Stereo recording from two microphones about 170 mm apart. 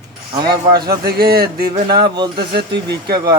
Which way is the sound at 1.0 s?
65° right (ahead or behind).